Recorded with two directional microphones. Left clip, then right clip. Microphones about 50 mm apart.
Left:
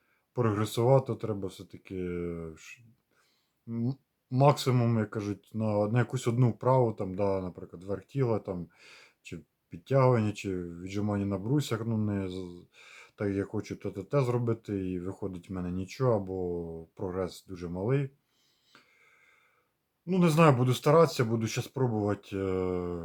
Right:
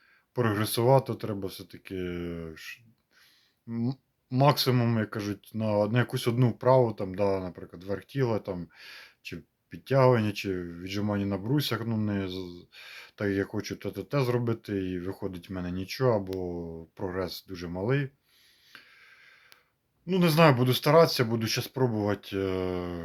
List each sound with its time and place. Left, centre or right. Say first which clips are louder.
0.3 s speech: right 2 dB; left
2.6 s speech: right 7 dB; left
17.7 s speech: right 2 dB; centre
18.7 s a sound: right 8 dB; left
20.1 s speech: right 2 dB; left